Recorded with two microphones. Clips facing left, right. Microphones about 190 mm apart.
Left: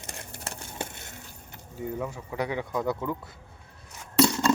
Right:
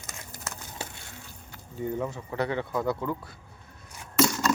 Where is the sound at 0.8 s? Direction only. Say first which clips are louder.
Left 6 dB; 55° left (ahead or behind).